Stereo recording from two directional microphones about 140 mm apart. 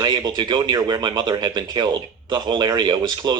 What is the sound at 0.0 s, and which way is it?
Speech, 30° right (ahead or behind).